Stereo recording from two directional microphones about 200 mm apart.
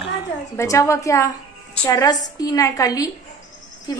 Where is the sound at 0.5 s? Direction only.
15° left (ahead or behind).